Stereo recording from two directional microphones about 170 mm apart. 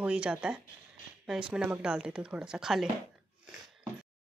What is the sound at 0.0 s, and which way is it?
Speech, 5° right (ahead or behind).